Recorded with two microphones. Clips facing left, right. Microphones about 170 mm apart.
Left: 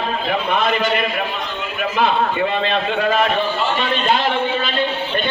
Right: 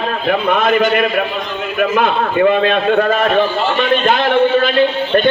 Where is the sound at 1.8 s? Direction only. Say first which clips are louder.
Right 3 dB; 55° right (ahead or behind).